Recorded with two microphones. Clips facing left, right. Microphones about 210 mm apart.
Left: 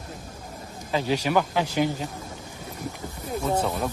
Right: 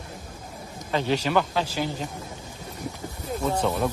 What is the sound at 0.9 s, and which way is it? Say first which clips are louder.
Speech: even; 10° left (ahead or behind).